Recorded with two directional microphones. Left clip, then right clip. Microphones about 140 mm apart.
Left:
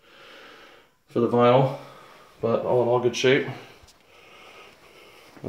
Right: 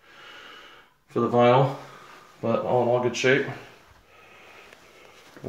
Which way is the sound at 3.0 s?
25° left (ahead or behind).